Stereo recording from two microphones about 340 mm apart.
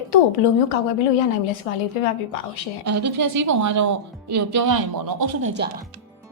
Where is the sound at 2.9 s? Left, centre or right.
Right.